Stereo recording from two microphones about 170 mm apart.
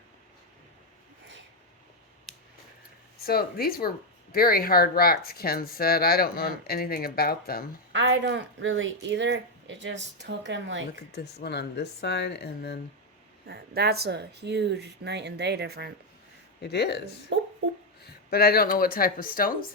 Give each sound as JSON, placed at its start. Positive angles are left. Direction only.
{"t": 2.3, "sound": "a sound", "side_deg": 0}
{"t": 3.2, "sound": "speech", "side_deg": 60}
{"t": 7.9, "sound": "speech", "side_deg": -90}
{"t": 11.4, "sound": "speech", "side_deg": 75}
{"t": 13.5, "sound": "speech", "side_deg": -70}
{"t": 16.6, "sound": "speech", "side_deg": 75}
{"t": 17.3, "sound": "a sound", "side_deg": -90}
{"t": 18.0, "sound": "speech", "side_deg": 65}